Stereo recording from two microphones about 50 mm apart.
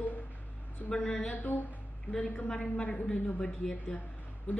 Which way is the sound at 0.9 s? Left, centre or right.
Centre.